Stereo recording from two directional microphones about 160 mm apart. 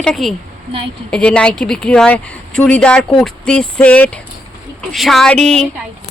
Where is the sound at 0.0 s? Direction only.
Centre (ahead or behind).